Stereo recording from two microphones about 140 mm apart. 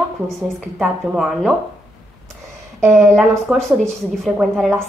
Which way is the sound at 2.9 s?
Centre (ahead or behind).